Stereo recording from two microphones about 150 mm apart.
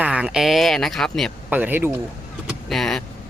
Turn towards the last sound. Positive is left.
turn(degrees=5)  # may be behind; listen again after turning